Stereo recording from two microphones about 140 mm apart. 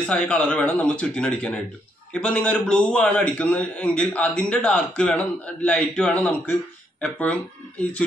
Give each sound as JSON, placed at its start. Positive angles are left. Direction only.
{"t": 0.0, "sound": "a man's voice", "side_deg": 10}